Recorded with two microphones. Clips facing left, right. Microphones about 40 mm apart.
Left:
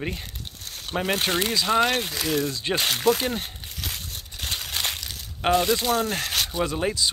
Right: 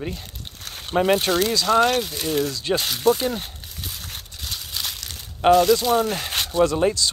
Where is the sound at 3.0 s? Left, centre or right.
Left.